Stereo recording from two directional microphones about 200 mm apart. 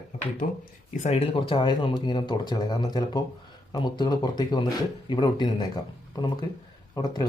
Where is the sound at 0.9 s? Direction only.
35° left (ahead or behind).